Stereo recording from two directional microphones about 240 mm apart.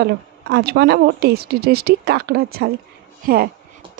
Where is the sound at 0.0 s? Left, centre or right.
Right.